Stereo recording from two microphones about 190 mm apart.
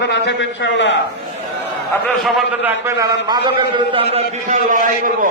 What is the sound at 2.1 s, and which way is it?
A man's voice, centre (ahead or behind).